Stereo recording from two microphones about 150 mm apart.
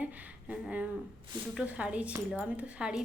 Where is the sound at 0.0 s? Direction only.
10° right (ahead or behind).